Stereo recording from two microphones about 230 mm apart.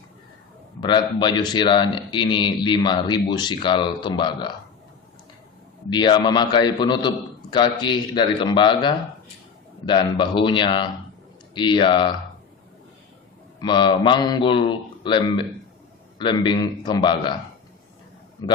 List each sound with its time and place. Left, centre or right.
0.8 s a man's voice: centre
5.9 s a man's voice: centre
13.6 s a man's voice: centre